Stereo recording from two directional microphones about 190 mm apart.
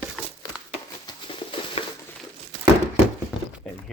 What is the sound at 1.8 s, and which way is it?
Crumpling, 30° left (ahead or behind).